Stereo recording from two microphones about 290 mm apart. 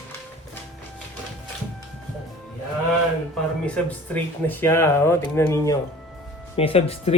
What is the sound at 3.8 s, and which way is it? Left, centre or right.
Speech, centre.